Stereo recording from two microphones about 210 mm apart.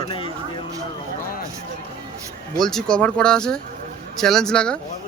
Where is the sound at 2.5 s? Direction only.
Centre (ahead or behind).